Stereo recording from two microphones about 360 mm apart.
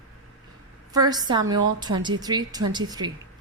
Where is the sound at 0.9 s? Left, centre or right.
Centre.